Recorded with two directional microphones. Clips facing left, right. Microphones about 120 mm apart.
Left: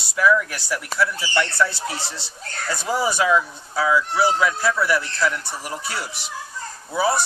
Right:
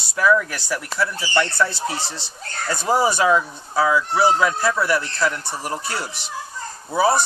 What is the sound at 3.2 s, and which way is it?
Speech, 40° right (ahead or behind).